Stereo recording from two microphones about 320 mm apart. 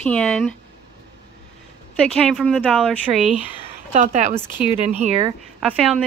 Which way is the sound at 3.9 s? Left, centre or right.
Right.